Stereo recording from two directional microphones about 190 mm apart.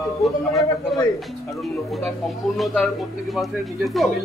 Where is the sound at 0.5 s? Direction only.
15° left (ahead or behind).